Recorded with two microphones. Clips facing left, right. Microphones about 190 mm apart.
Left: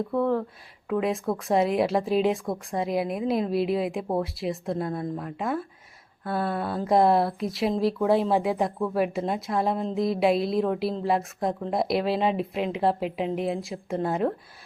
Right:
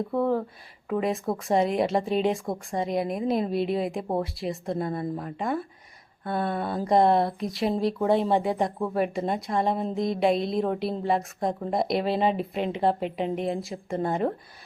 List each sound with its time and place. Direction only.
0.1 s speech: centre (ahead or behind)